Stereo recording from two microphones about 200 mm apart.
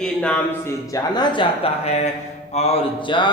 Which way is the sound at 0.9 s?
20° left (ahead or behind).